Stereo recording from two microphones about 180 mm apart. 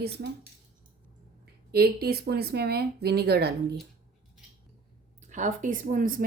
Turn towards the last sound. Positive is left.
turn(degrees=-50)  # may be behind; listen again after turning